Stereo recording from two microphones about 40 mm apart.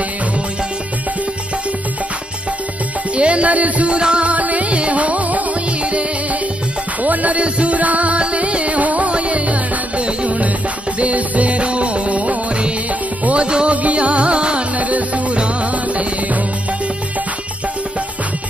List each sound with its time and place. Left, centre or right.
3.2 s music: right
7.0 s music: right
14.8 s music: right